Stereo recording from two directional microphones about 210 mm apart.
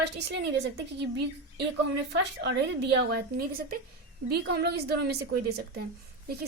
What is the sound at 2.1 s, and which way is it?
Speech, 55° right (ahead or behind).